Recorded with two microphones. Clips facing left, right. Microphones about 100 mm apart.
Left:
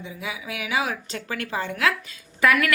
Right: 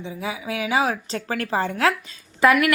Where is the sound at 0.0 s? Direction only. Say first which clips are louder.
Right 4 dB; 30° right (ahead or behind).